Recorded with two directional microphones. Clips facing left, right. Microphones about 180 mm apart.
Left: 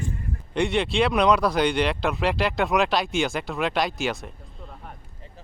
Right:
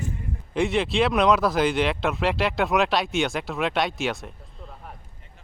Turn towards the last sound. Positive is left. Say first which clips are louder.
# even
turn(degrees=0)  # may be behind; listen again after turning